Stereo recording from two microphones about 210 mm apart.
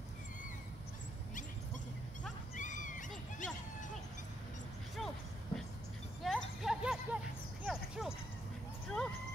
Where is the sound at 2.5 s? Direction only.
35° left (ahead or behind).